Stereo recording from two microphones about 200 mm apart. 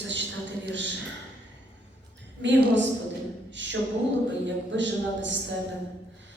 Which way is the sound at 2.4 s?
65° right (ahead or behind).